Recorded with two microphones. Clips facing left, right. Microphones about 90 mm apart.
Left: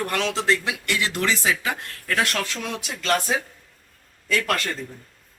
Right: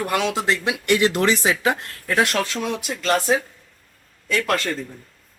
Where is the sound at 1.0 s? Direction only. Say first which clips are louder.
Right 2 dB; 30° right (ahead or behind).